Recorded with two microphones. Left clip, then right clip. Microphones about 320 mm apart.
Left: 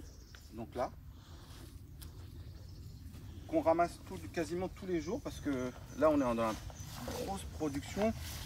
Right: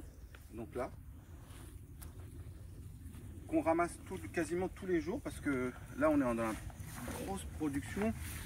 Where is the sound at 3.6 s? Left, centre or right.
Centre.